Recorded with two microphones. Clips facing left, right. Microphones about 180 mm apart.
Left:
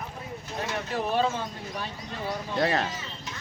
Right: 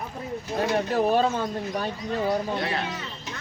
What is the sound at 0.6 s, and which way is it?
Speech, 40° right (ahead or behind).